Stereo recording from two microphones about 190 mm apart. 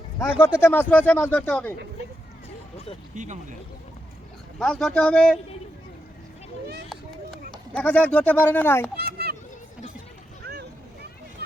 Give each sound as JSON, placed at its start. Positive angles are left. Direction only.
{"t": 0.2, "sound": "speech", "side_deg": 10}
{"t": 4.6, "sound": "a man's voice", "side_deg": 5}
{"t": 7.5, "sound": "speech", "side_deg": 5}
{"t": 9.0, "sound": "a sound", "side_deg": -55}
{"t": 10.4, "sound": "vehicle", "side_deg": -60}